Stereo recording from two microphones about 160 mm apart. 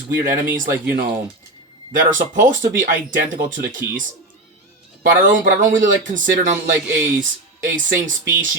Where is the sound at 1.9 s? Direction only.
55° right (ahead or behind).